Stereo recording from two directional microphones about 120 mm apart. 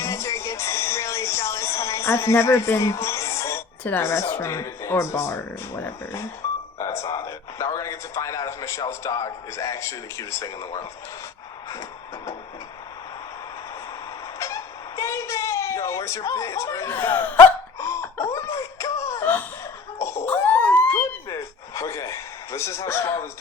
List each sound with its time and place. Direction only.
0.0 s music: 25° left (ahead or behind)
6.7 s a sound: 25° left (ahead or behind)
8.9 s speech: 30° left (ahead or behind)
11.7 s vehicle: 25° left (ahead or behind)
14.3 s a sound: 25° left (ahead or behind)
20.0 s cough: 25° left (ahead or behind)
21.8 s a man's voice: 25° left (ahead or behind)